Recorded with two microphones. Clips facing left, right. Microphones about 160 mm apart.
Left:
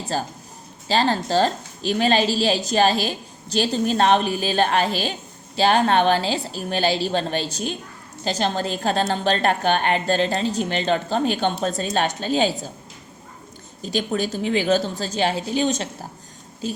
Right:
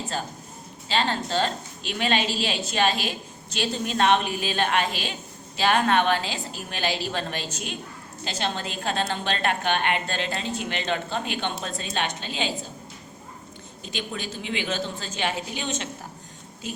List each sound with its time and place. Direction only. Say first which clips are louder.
0.1 s a woman's voice: left 5 dB; 35° left (ahead or behind)
13.8 s a woman's voice: left 9 dB; 40° left (ahead or behind)